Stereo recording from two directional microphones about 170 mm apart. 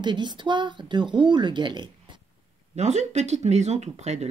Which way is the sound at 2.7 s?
40° right (ahead or behind).